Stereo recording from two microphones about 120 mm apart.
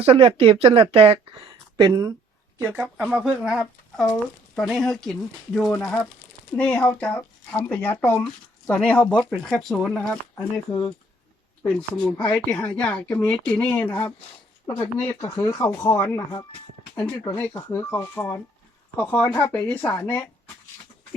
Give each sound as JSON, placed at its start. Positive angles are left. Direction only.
{"t": 0.0, "sound": "speech", "side_deg": -50}
{"t": 1.9, "sound": "speech", "side_deg": -30}
{"t": 2.6, "sound": "speech", "side_deg": -20}
{"t": 3.1, "sound": "speech", "side_deg": -5}